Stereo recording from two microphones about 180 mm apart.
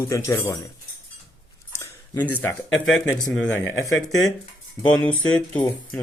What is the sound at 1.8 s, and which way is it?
A man's voice, 10° left (ahead or behind).